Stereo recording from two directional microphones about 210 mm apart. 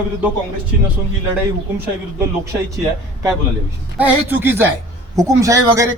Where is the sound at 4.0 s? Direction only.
10° right (ahead or behind).